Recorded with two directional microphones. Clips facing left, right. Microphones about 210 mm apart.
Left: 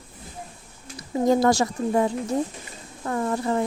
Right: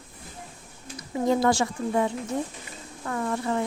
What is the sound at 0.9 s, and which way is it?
A woman's voice, 40° left (ahead or behind).